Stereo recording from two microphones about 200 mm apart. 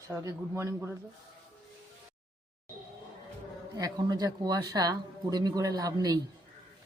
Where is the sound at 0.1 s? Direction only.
15° right (ahead or behind).